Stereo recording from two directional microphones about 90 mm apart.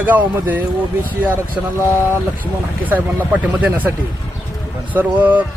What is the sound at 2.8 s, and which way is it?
Speech, 20° right (ahead or behind).